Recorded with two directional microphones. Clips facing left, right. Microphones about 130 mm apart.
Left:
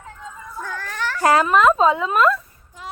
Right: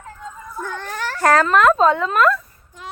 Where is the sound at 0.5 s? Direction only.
20° right (ahead or behind).